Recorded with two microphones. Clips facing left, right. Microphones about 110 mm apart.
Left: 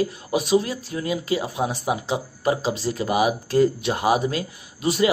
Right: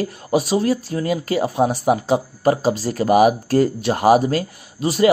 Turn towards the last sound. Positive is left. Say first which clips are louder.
# right 3 dB
turn(degrees=-40)  # may be behind; listen again after turning